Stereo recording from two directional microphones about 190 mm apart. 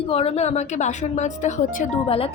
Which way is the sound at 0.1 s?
30° left (ahead or behind).